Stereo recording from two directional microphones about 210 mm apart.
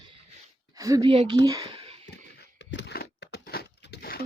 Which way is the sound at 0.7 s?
15° right (ahead or behind).